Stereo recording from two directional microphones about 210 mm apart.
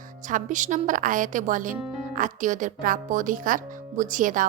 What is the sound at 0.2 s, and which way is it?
Speech, 40° right (ahead or behind).